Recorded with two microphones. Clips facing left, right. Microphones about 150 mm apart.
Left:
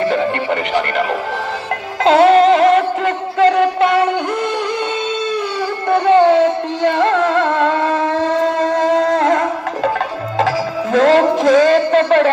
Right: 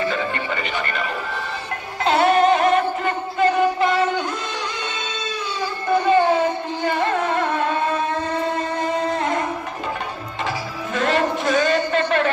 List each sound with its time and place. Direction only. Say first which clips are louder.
0.0 s speech: left 7 dB; 65° left (ahead or behind)
2.0 s music: left 7 dB; 90° left; by 4.1 s 70° left (ahead or behind)
5.9 s music: left 6 dB; 75° left (ahead or behind); by 9.9 s 90° left
10.9 s a sound: left 9 dB; 90° left